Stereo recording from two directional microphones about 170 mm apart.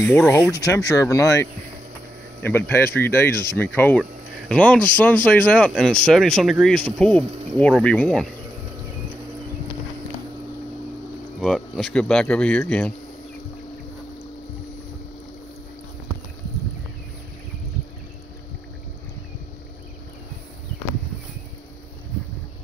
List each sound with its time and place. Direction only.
0.0 s speech: 10° left (ahead or behind)
0.5 s speech: 20° left (ahead or behind); by 8.3 s 5° left (ahead or behind)
11.3 s speech: centre (ahead or behind)